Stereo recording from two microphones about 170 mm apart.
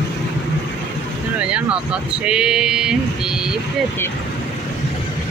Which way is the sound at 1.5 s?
5° right (ahead or behind).